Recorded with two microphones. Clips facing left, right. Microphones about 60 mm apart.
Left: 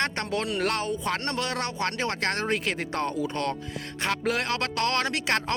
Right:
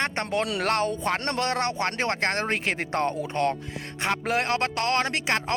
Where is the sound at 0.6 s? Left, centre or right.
Right.